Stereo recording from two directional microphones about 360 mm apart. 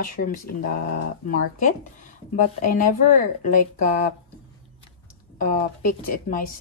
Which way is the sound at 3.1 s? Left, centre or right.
Left.